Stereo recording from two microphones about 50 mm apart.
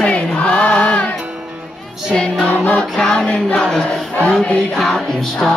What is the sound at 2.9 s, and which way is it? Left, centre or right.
Music, centre.